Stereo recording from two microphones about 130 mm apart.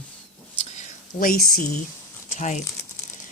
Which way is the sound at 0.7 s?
65° left (ahead or behind).